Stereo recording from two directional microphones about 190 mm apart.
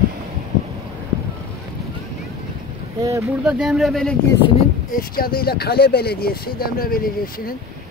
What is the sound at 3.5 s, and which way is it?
Speech, centre (ahead or behind).